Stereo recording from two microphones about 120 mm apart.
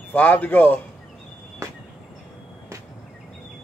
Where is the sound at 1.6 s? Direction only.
25° right (ahead or behind).